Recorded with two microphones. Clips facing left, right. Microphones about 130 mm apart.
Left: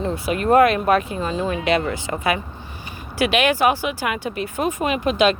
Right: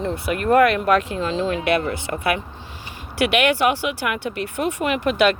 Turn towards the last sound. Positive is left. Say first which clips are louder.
# even
turn(degrees=-65)  # may be behind; listen again after turning